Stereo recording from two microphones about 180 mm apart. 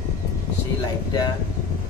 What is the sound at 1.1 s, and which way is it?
Speech, 20° left (ahead or behind).